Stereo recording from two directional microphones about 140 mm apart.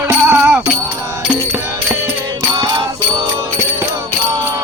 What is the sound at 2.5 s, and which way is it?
Music, 35° right (ahead or behind).